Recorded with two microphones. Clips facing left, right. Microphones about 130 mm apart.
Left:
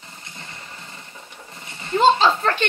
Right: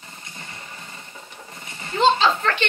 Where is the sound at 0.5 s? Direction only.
20° right (ahead or behind).